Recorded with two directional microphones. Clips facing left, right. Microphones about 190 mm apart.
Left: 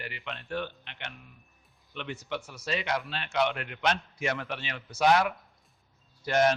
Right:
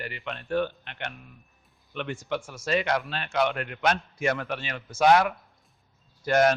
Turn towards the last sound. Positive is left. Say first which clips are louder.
# right 3 dB
turn(degrees=-55)  # may be behind; listen again after turning